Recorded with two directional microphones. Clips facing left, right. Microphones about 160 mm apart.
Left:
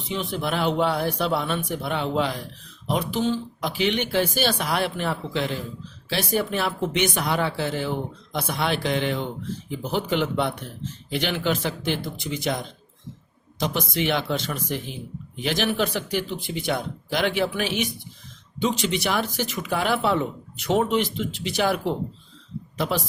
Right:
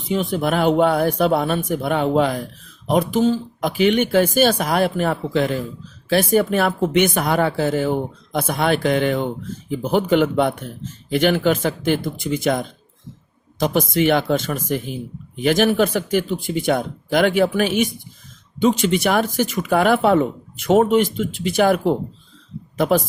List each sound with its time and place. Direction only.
0.1 s speech: 45° right (ahead or behind)